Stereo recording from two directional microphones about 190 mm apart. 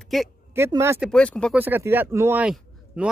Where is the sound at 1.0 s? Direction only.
5° left (ahead or behind).